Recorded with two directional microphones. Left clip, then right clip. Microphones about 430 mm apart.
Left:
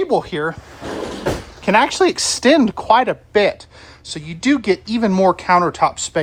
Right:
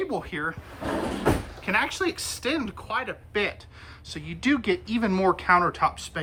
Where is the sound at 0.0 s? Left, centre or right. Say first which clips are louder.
Left 11 dB; centre.